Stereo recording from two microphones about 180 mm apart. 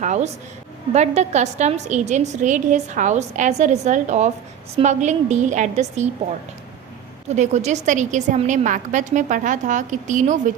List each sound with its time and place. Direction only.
0.0 s a woman's voice: 40° right (ahead or behind)
7.3 s a woman's voice: 40° right (ahead or behind)